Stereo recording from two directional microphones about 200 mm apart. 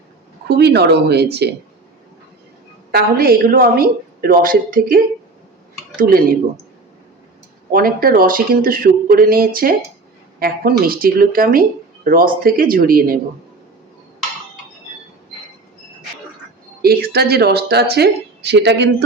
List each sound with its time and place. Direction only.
0.4 s speech: 55° right (ahead or behind)
2.9 s speech: 50° right (ahead or behind)
7.7 s speech: 45° right (ahead or behind)
16.8 s speech: 50° right (ahead or behind)